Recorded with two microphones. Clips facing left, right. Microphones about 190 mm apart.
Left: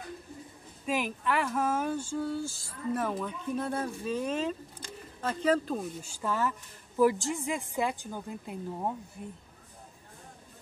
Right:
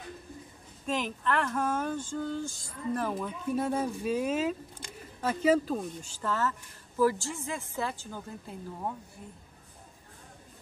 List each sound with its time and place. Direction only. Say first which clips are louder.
0.8 s speech: even; 10° left (ahead or behind)
3.1 s speech: right 1 dB; 5° right (ahead or behind); by 8.9 s 15° left (ahead or behind)